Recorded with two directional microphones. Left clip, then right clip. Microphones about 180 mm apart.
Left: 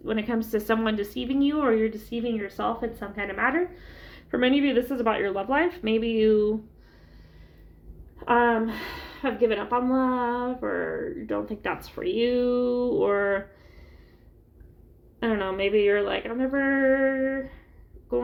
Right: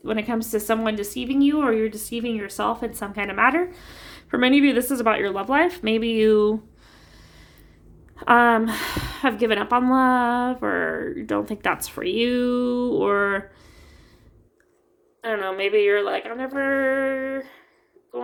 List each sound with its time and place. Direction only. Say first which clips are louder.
0.0 s speech: right 3 dB; 25° right (ahead or behind)
8.1 s a woman's voice: right 5 dB; 45° right (ahead or behind)
15.3 s a woman's voice: right 3 dB; 30° right (ahead or behind)